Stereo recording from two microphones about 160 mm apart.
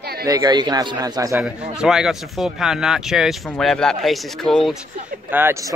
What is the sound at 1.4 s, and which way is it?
Speech, 5° right (ahead or behind).